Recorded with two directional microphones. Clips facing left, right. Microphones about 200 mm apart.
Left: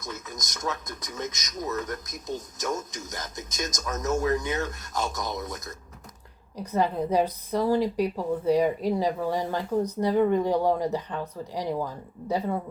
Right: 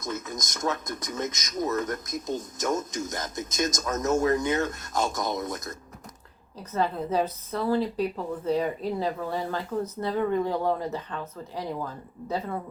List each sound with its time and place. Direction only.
0.0 s speech: 50° right (ahead or behind)
6.6 s a woman's voice: 15° left (ahead or behind)